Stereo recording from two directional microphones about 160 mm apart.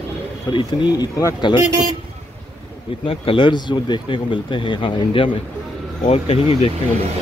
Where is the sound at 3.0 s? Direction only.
35° left (ahead or behind).